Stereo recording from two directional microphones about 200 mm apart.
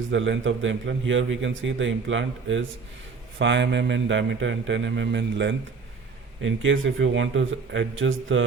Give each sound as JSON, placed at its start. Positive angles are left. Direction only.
{"t": 0.1, "sound": "a man's voice", "side_deg": -70}